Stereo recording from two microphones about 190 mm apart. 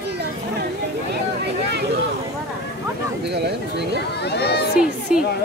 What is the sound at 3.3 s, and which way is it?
Speech, 60° right (ahead or behind).